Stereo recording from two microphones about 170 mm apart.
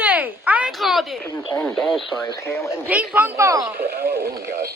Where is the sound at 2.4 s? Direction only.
15° left (ahead or behind).